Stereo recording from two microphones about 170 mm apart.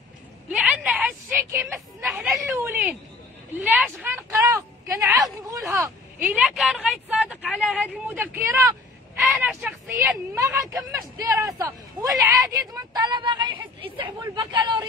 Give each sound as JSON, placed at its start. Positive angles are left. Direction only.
{"t": 0.5, "sound": "a sound", "side_deg": -5}
{"t": 6.1, "sound": "speech", "side_deg": -5}
{"t": 9.2, "sound": "speech", "side_deg": -5}